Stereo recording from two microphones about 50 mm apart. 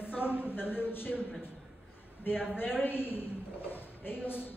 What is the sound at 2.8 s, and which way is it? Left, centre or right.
Speech, left.